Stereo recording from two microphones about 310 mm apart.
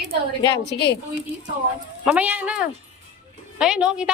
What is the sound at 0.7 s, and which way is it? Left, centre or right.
Speech, left.